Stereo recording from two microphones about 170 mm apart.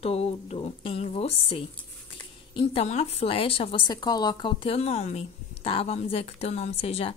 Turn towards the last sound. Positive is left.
turn(degrees=35)  # may be behind; listen again after turning